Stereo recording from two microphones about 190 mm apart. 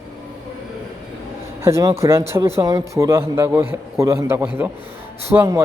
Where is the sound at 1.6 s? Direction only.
15° right (ahead or behind).